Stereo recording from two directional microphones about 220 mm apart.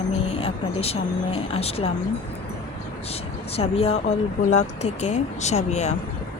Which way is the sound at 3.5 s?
25° left (ahead or behind).